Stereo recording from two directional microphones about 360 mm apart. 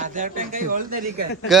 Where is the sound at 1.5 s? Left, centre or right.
Centre.